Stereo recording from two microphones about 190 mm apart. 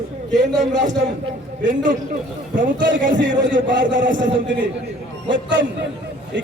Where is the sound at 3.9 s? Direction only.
45° right (ahead or behind).